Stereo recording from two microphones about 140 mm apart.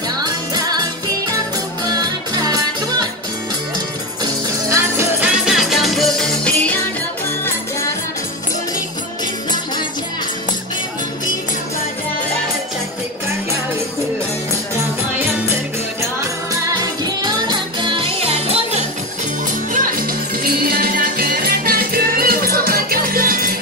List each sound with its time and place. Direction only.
0.2 s music: 30° right (ahead or behind)
1.9 s music: 25° right (ahead or behind)
4.7 s music: 15° right (ahead or behind)
5.3 s music: 5° right (ahead or behind)
16.2 s music: 25° right (ahead or behind); by 18.9 s 50° right (ahead or behind)
19.7 s music: 85° right